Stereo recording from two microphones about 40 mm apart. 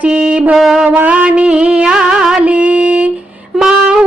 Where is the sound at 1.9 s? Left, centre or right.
Centre.